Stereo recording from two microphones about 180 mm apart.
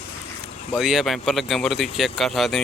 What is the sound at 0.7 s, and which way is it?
Speech, centre (ahead or behind).